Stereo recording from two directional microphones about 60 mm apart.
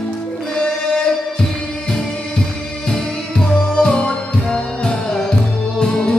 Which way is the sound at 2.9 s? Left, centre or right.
Centre.